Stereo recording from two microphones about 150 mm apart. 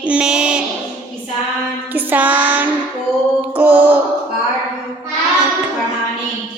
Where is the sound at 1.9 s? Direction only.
10° right (ahead or behind).